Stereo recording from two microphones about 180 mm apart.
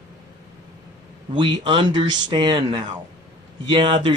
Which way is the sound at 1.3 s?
25° right (ahead or behind).